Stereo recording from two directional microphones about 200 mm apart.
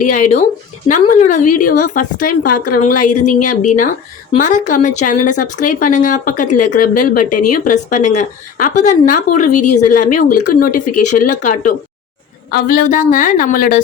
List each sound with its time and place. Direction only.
0.0 s a woman's voice: 40° left (ahead or behind)